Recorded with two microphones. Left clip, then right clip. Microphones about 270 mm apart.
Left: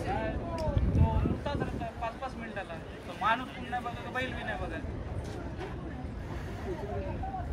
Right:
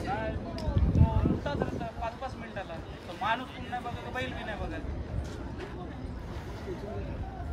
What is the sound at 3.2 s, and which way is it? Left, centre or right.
Vehicle, right.